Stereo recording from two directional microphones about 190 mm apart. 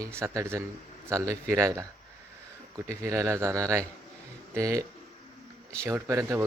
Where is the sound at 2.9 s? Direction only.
15° right (ahead or behind).